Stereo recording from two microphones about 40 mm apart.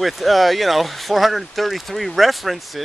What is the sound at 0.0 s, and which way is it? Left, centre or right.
Speech, centre.